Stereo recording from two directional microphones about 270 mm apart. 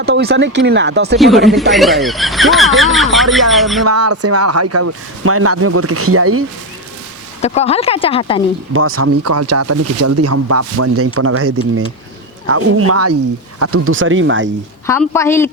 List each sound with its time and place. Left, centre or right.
0.0 s speech: right
1.2 s speech: centre
3.8 s speech: right
7.4 s speech: left
8.7 s speech: right
14.8 s a woman's voice: centre